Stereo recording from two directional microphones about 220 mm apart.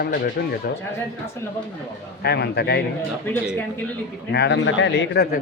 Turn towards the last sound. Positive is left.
turn(degrees=55)  # may be behind; listen again after turning